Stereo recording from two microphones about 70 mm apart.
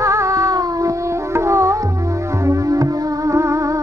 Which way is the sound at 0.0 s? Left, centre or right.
Right.